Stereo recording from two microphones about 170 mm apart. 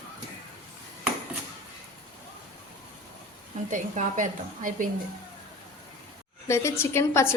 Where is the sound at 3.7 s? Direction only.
50° right (ahead or behind).